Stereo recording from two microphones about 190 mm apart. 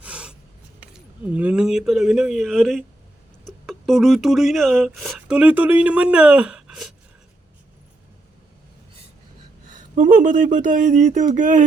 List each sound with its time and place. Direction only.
0.0 s writing: 5° right (ahead or behind)
0.8 s speech: 5° right (ahead or behind)
9.9 s speech: 45° right (ahead or behind)